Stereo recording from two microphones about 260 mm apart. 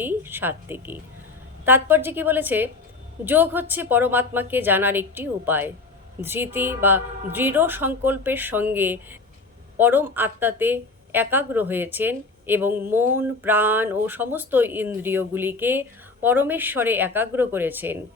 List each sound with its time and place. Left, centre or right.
0.0 s speech: centre